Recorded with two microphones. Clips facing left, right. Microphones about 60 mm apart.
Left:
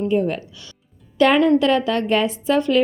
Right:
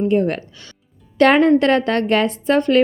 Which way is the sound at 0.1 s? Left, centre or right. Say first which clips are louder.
Right 2 dB; right.